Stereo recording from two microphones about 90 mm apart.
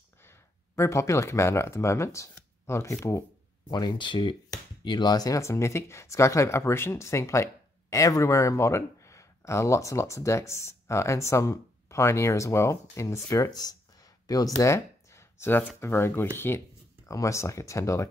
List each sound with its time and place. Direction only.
0.2 s speech: 30° left (ahead or behind)
3.7 s speech: 60° left (ahead or behind)
4.5 s speech: 50° left (ahead or behind)
14.6 s a sound: 30° left (ahead or behind)
15.8 s speech: 25° left (ahead or behind)